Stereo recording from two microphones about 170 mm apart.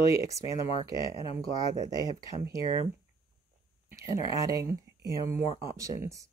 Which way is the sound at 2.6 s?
35° left (ahead or behind).